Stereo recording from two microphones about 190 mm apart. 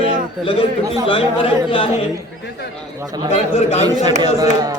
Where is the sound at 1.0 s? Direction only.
30° left (ahead or behind).